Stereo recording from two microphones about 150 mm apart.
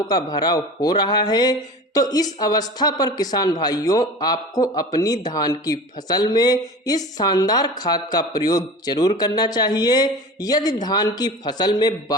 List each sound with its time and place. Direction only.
0.1 s speech: 25° left (ahead or behind)